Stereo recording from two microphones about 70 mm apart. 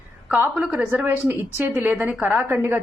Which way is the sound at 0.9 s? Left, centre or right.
Right.